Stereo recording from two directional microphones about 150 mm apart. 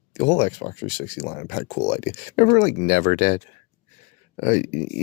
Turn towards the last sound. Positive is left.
turn(degrees=55)  # may be behind; listen again after turning